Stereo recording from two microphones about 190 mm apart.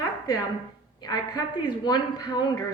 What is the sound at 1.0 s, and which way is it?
A woman's voice, 20° left (ahead or behind).